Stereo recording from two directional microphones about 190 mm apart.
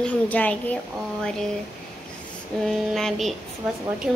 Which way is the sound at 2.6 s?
Centre (ahead or behind).